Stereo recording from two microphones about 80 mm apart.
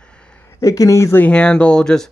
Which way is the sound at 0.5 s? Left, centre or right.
Left.